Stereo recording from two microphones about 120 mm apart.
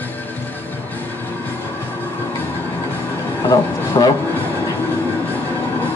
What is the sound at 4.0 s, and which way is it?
Speech, 35° left (ahead or behind).